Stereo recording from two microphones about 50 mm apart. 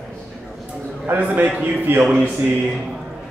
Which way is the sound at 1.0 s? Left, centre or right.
Right.